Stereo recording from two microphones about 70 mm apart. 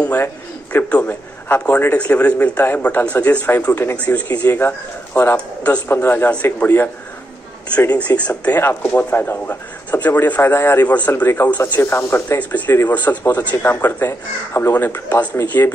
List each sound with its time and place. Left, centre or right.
0.8 s a man's voice: centre
1.5 s a man's voice: left
8.2 s a man's voice: left
11.8 s speech: left
12.4 s a man's voice: left
13.6 s speech: left